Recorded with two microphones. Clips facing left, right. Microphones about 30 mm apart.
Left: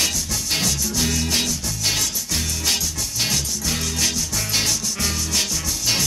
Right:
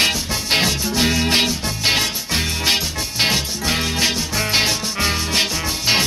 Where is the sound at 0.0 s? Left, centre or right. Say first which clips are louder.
Right 5 dB; right.